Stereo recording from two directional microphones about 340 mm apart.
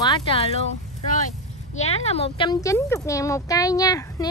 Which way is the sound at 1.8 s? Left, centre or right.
Centre.